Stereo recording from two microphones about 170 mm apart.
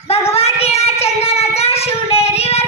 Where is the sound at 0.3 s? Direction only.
35° left (ahead or behind).